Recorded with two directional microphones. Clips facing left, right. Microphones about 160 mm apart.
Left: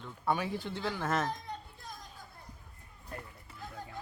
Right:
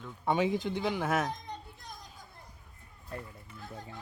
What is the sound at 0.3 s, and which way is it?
Speech, 20° right (ahead or behind).